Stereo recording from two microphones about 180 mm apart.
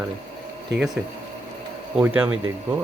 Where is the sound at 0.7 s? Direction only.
75° right (ahead or behind).